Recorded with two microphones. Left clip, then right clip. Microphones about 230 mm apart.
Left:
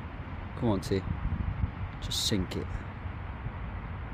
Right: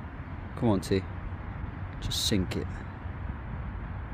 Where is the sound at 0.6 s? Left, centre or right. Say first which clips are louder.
Right 3 dB; centre.